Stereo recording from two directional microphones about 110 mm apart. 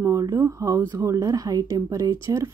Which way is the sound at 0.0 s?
30° right (ahead or behind).